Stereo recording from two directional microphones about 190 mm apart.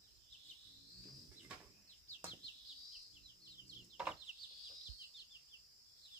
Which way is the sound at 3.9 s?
5° right (ahead or behind).